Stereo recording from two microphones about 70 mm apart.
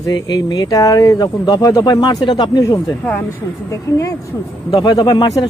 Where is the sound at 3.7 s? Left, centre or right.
Left.